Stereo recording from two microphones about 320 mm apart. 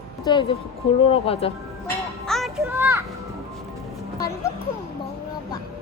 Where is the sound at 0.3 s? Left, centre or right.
Centre.